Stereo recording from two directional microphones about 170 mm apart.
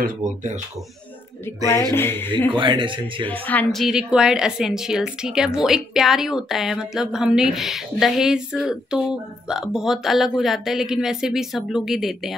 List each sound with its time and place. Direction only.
0.0 s speech: 45° right (ahead or behind)
1.7 s speech: 15° left (ahead or behind)
2.5 s speech: 30° right (ahead or behind)
3.3 s a woman's voice: 10° left (ahead or behind)